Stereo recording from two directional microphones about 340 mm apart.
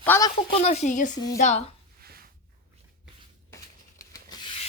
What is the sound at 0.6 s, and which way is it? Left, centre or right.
Speech, centre.